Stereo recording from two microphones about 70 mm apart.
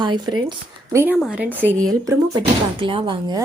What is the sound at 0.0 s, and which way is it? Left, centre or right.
Speech, right.